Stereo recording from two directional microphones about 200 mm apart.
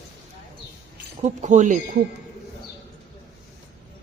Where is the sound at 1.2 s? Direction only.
35° right (ahead or behind).